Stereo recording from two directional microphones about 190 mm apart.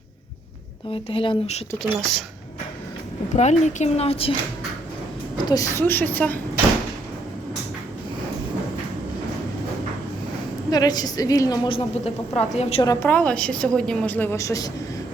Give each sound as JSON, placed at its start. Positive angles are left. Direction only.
{"t": 1.1, "sound": "a woman's voice", "side_deg": 30}
{"t": 1.8, "sound": "speech", "side_deg": 0}
{"t": 3.3, "sound": "a woman's voice", "side_deg": 40}
{"t": 5.5, "sound": "a woman's voice", "side_deg": 20}
{"t": 10.7, "sound": "a woman's voice", "side_deg": 20}
{"t": 12.8, "sound": "a woman's voice", "side_deg": 15}